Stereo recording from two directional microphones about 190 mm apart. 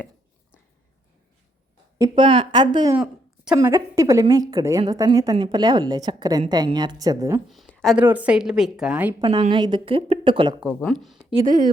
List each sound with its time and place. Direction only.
2.0 s a woman's voice: 25° right (ahead or behind)
3.0 s a sound: 5° right (ahead or behind)
3.6 s a woman's voice: 15° right (ahead or behind)
7.4 s speech: centre (ahead or behind)
7.9 s a woman's voice: 10° right (ahead or behind)
9.2 s a woman's voice: 25° right (ahead or behind)
10.8 s a woman's voice: centre (ahead or behind)
11.4 s speech: 45° right (ahead or behind)